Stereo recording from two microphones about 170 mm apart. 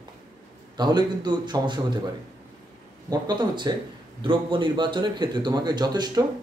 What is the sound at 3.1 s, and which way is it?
Speech, 25° right (ahead or behind).